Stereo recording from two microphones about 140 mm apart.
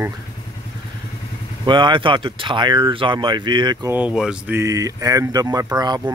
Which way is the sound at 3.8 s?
10° right (ahead or behind).